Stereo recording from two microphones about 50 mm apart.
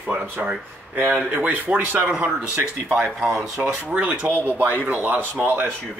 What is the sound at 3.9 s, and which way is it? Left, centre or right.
Speech, centre.